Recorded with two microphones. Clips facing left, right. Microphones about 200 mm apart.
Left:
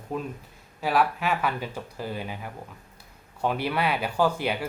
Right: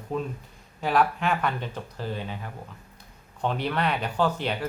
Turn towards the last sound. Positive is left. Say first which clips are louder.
# left 1 dB
turn(degrees=10)  # may be behind; listen again after turning